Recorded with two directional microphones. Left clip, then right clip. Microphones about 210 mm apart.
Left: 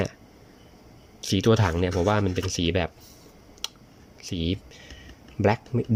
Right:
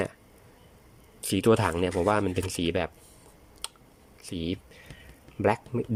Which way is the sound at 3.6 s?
Centre (ahead or behind).